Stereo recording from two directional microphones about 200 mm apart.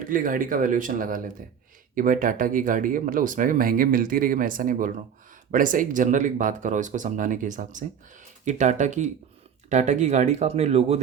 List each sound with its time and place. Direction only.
0.1 s speech: 45° right (ahead or behind)